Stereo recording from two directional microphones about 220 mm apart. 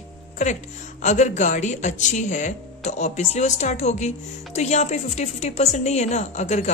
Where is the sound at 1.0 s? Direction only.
30° left (ahead or behind).